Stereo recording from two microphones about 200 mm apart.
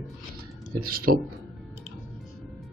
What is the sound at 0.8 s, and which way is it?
Speech, 45° right (ahead or behind).